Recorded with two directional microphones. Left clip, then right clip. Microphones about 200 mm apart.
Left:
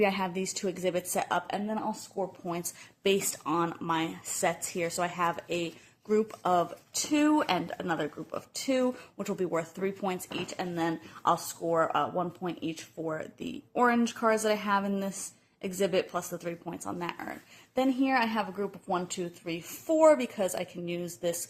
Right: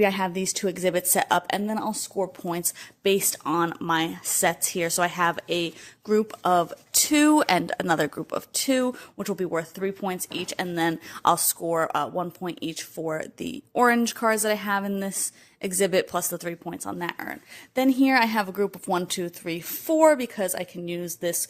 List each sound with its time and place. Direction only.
0.0 s speech: 40° right (ahead or behind)
3.0 s speech: 35° right (ahead or behind)
7.1 s speech: 50° right (ahead or behind); by 10.2 s 35° right (ahead or behind)
10.4 s speech: 55° right (ahead or behind)